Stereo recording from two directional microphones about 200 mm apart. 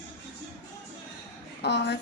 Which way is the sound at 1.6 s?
60° left (ahead or behind).